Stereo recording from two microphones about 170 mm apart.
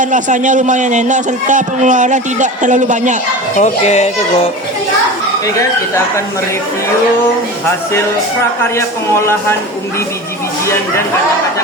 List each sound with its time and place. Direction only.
0.0 s speech: 50° right (ahead or behind)
3.6 s speech: 40° left (ahead or behind)
9.2 s speech: 15° left (ahead or behind)